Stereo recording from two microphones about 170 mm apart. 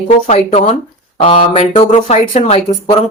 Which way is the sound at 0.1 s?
40° left (ahead or behind).